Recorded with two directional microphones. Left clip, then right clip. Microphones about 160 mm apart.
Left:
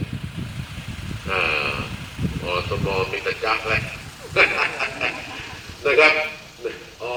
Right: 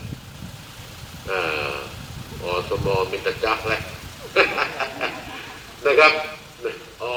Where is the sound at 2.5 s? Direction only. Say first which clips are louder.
Right 2 dB; 70° right (ahead or behind).